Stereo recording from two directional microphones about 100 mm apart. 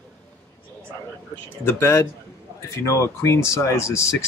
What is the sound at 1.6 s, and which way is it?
Speech, 25° left (ahead or behind).